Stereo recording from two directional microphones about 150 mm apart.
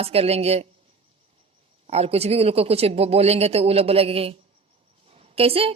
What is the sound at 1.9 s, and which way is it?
A woman's voice, 45° right (ahead or behind).